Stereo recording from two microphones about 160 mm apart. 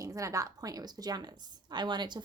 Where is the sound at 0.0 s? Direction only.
20° right (ahead or behind).